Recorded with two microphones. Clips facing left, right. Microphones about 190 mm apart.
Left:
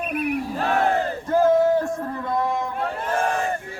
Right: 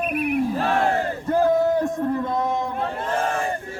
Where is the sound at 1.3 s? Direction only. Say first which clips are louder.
Left 1 dB; 15° right (ahead or behind).